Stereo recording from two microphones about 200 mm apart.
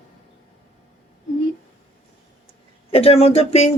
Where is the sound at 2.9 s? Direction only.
30° left (ahead or behind).